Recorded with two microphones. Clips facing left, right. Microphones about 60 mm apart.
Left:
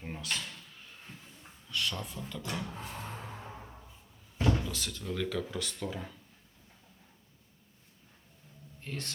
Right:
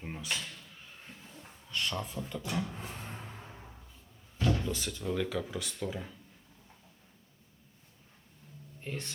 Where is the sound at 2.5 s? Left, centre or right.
Centre.